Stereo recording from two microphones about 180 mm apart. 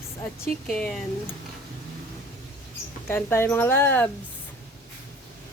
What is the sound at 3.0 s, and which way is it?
Speech, 15° left (ahead or behind).